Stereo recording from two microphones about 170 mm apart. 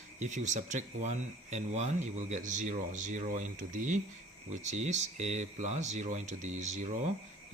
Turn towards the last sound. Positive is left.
turn(degrees=-45)  # may be behind; listen again after turning